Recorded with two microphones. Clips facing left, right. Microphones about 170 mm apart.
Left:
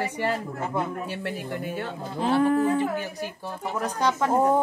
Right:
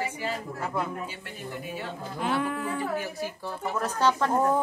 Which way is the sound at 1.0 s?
65° left (ahead or behind).